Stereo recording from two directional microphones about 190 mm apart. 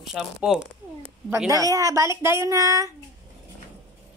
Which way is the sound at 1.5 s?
20° right (ahead or behind).